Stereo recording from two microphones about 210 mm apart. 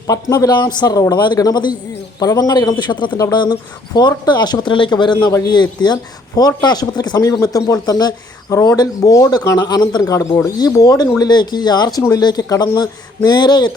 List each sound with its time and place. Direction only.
0.1 s a man's voice: 15° left (ahead or behind)